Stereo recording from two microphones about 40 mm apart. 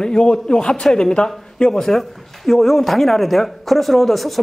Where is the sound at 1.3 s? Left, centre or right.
Centre.